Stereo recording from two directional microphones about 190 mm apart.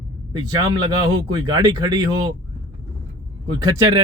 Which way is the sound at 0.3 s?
20° right (ahead or behind).